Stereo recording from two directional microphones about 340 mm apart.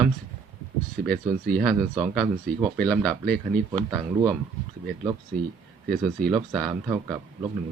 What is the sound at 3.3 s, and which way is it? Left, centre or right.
Speech, centre.